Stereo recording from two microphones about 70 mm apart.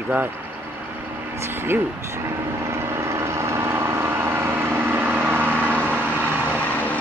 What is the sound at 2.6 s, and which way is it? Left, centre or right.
Vehicle, right.